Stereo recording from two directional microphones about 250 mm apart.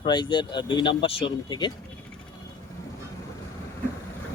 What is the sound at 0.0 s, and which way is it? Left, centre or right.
Speech, centre.